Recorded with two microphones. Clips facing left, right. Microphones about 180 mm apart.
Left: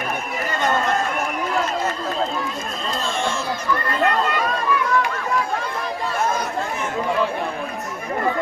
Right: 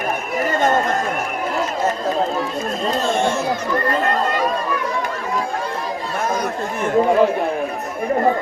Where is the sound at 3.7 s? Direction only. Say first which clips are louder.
Left 1 dB; 40° right (ahead or behind).